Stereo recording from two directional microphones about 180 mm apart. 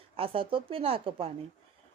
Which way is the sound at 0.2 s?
30° right (ahead or behind).